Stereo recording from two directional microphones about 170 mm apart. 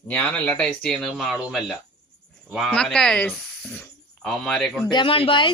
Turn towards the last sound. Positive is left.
turn(degrees=30)  # may be behind; listen again after turning